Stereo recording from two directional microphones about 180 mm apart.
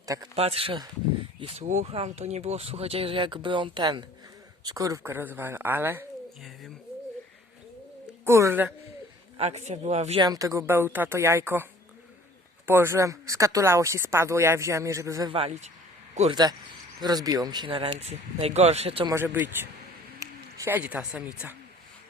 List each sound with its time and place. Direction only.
0.0 s a man's voice: 20° right (ahead or behind)
0.3 s speech: 35° right (ahead or behind); by 6.1 s 10° right (ahead or behind)
8.2 s speech: 15° right (ahead or behind)
9.4 s speech: 40° right (ahead or behind)
10.2 s speech: 20° right (ahead or behind)
15.3 s speech: 30° right (ahead or behind)
16.3 s speech: 20° right (ahead or behind)
19.1 s speech: 10° right (ahead or behind)
20.1 s a sound: 15° right (ahead or behind)